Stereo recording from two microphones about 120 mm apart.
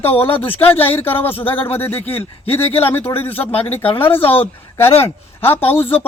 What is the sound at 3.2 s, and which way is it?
Speech, 15° left (ahead or behind).